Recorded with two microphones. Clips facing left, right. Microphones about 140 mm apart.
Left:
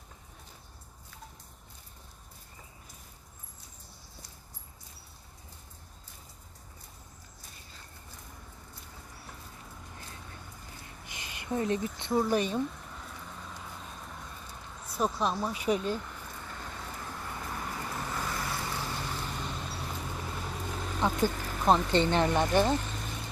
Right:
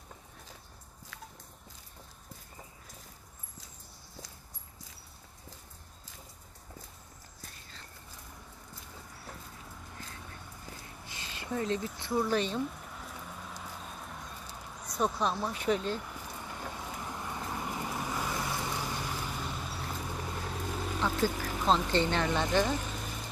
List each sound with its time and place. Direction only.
11.0 s speech: 15° left (ahead or behind)
12.6 s a sound: 5° right (ahead or behind)
14.8 s speech: 5° left (ahead or behind)
16.0 s vehicle: 10° right (ahead or behind)
21.2 s a sound: 10° right (ahead or behind)
22.1 s speech: 15° left (ahead or behind)
22.8 s vehicle: 10° right (ahead or behind)